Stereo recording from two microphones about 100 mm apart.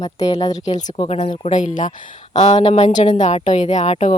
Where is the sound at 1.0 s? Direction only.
90° left.